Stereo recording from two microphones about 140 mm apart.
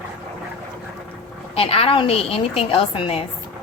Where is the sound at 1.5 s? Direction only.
45° left (ahead or behind).